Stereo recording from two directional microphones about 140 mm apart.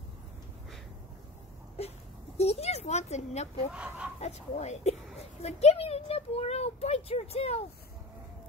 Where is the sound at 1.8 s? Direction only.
50° left (ahead or behind).